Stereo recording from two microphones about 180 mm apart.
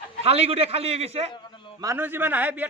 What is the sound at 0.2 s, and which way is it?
A man's voice, 35° right (ahead or behind).